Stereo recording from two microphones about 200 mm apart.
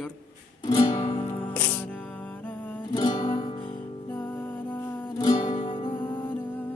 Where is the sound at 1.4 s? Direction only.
10° left (ahead or behind).